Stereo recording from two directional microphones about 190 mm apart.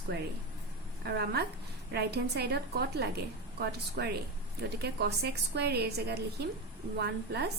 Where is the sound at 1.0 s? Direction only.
55° right (ahead or behind).